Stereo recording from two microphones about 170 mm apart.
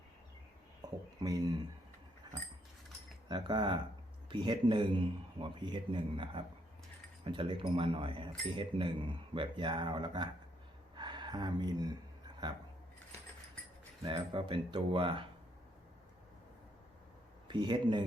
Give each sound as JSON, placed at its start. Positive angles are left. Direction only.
{"t": 0.8, "sound": "speech", "side_deg": -20}
{"t": 2.3, "sound": "dog", "side_deg": -25}
{"t": 3.2, "sound": "a man's voice", "side_deg": -25}
{"t": 14.0, "sound": "a man's voice", "side_deg": -25}
{"t": 17.5, "sound": "a man's voice", "side_deg": -25}